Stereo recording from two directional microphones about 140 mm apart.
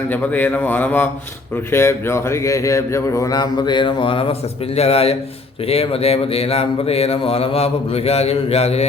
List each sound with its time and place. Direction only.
0.1 s speech: 15° left (ahead or behind); by 8.9 s 50° left (ahead or behind)